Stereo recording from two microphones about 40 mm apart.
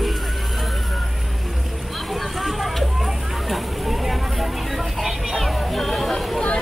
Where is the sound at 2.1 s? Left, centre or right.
Centre.